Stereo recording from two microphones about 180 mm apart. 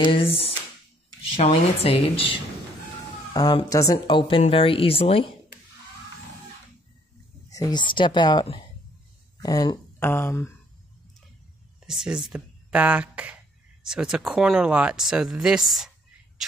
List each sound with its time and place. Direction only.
0.0 s speech: 30° left (ahead or behind)
3.3 s speech: 20° left (ahead or behind)
7.4 s speech: 20° left (ahead or behind)
11.8 s speech: 5° right (ahead or behind)